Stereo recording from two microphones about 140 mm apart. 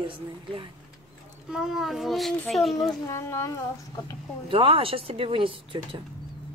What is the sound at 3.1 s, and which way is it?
Speech, 20° left (ahead or behind).